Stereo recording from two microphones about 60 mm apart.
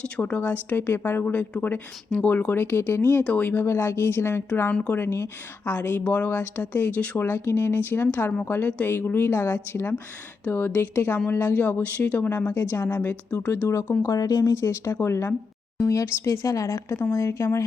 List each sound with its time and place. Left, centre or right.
0.0 s speech: left
1.3 s speech: left
4.7 s speech: centre
4.9 s speech: left
6.1 s speech: left
7.2 s speech: left
10.5 s speech: left
10.8 s speech: left
12.7 s speech: left
13.0 s speech: left
14.0 s speech: left
16.9 s speech: left